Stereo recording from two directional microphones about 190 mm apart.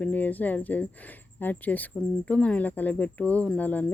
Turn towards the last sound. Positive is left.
turn(degrees=10)  # may be behind; listen again after turning